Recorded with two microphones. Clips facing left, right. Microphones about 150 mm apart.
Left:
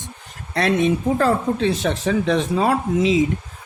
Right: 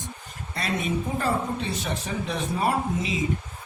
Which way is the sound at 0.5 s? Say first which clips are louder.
Left 9 dB; 85° left.